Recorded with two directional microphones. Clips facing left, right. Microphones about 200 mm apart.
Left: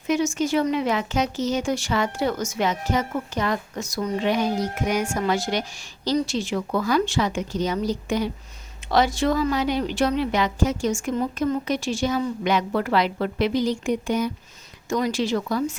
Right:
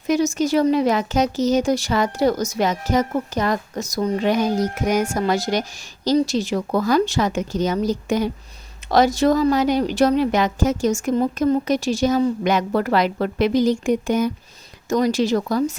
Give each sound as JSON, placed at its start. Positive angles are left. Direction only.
{"t": 0.1, "sound": "speech", "side_deg": -40}